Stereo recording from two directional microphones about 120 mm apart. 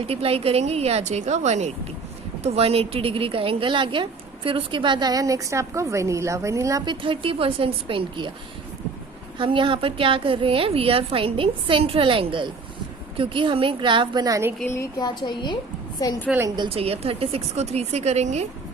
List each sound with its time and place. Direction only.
0.0 s a woman's voice: 55° right (ahead or behind); by 1.7 s 75° right (ahead or behind)
2.4 s a woman's voice: 55° right (ahead or behind); by 6.8 s 25° right (ahead or behind)
6.8 s a woman's voice: 45° right (ahead or behind)
9.4 s a woman's voice: 45° right (ahead or behind)
14.6 s speech: 20° left (ahead or behind)
14.9 s a woman's voice: 35° left (ahead or behind)
16.6 s a woman's voice: 55° right (ahead or behind); by 18.4 s 70° right (ahead or behind)